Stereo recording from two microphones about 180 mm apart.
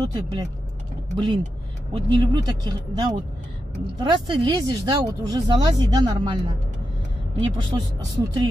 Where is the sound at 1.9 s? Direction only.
25° right (ahead or behind).